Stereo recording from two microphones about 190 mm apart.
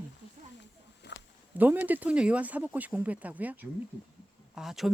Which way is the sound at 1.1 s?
65° left (ahead or behind).